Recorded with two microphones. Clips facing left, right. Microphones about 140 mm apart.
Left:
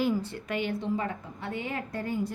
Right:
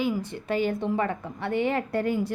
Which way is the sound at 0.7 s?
60° right (ahead or behind).